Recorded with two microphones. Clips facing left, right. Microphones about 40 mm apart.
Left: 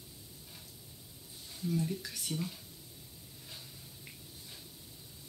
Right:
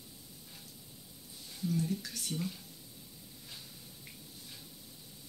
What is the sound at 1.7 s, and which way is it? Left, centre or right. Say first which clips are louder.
Speech: even; centre.